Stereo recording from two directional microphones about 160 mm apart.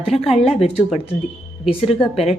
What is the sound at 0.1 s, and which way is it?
Speech, 40° left (ahead or behind).